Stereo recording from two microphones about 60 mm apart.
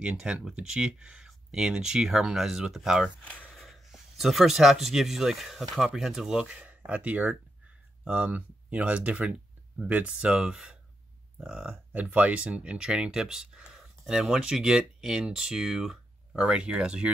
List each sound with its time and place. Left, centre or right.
0.0 s speech: centre
6.5 s a sound: right
6.9 s speech: right
8.3 s speech: right
11.9 s speech: right